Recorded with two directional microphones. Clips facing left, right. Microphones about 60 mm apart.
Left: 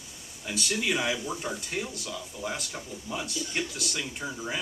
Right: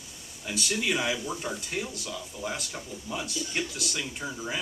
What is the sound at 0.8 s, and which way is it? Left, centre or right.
Speech, centre.